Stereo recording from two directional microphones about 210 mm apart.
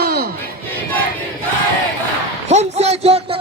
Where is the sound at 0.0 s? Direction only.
45° right (ahead or behind).